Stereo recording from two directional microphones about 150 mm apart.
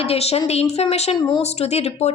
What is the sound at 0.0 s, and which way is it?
Speech, 45° left (ahead or behind).